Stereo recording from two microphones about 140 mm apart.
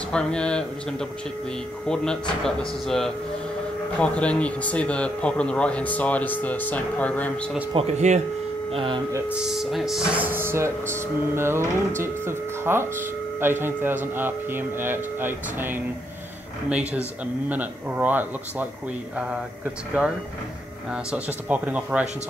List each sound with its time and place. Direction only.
0.1 s speech: 5° left (ahead or behind)
2.4 s speech: 5° left (ahead or behind)
7.7 s speech: 50° right (ahead or behind)
8.7 s speech: 35° right (ahead or behind)
9.3 s speech: 5° right (ahead or behind)
10.2 s speech: 15° right (ahead or behind)